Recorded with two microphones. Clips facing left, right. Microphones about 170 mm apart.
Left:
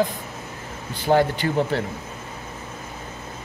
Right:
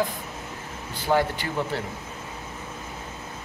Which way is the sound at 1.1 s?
35° left (ahead or behind).